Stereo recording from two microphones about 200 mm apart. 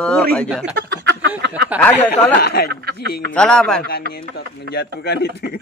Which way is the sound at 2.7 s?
55° right (ahead or behind).